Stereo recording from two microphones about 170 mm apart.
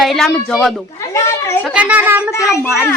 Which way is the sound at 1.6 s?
5° right (ahead or behind).